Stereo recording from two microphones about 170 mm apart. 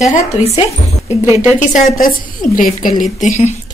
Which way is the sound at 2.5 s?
55° left (ahead or behind).